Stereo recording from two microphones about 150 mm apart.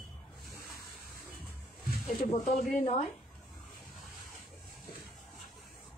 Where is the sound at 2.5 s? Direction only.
65° left (ahead or behind).